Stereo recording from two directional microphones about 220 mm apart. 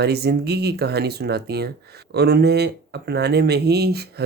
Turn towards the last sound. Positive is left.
turn(degrees=-45)  # may be behind; listen again after turning